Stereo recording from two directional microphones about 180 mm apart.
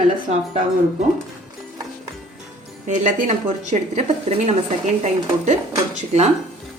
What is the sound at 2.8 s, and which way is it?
A woman's voice, 45° right (ahead or behind).